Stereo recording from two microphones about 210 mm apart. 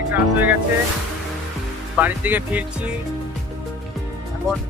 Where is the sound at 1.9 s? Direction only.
10° right (ahead or behind).